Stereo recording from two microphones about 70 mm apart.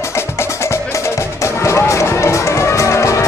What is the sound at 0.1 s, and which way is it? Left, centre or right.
Music, left.